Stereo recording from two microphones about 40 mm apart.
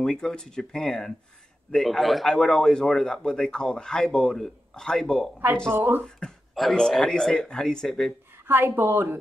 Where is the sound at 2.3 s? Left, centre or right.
Centre.